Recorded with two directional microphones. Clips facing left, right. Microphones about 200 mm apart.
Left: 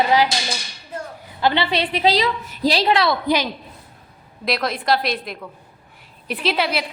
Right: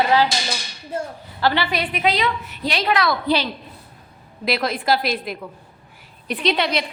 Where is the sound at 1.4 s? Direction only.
20° left (ahead or behind).